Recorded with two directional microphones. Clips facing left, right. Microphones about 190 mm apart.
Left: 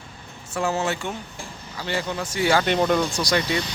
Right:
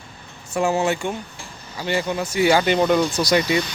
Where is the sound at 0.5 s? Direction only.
15° right (ahead or behind).